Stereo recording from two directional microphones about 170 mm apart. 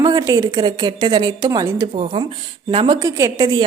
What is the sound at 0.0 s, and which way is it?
A woman's voice, 20° right (ahead or behind).